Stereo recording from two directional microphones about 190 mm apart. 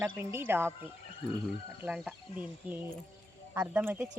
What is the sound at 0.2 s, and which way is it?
Speech, 10° right (ahead or behind).